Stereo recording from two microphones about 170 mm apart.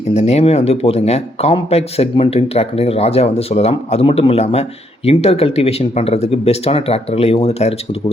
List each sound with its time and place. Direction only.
0.1 s speech: 40° left (ahead or behind)